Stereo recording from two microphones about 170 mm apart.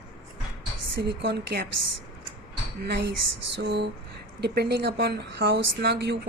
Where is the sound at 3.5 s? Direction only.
90° right.